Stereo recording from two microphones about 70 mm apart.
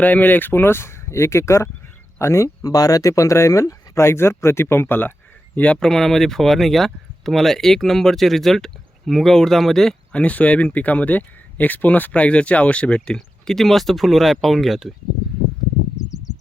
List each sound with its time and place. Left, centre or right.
0.0 s speech: left
2.6 s speech: left
5.5 s speech: centre
5.8 s speech: centre
10.1 s speech: centre